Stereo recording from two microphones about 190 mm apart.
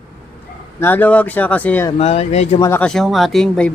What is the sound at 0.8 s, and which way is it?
Speech, 10° left (ahead or behind).